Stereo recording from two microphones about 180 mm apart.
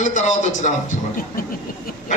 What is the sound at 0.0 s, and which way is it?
Speech, 45° left (ahead or behind).